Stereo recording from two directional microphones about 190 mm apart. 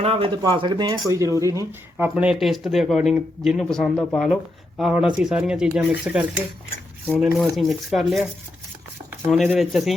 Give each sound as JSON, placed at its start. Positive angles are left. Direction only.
{"t": 0.0, "sound": "speech", "side_deg": -30}
{"t": 2.0, "sound": "speech", "side_deg": -5}
{"t": 9.3, "sound": "speech", "side_deg": 0}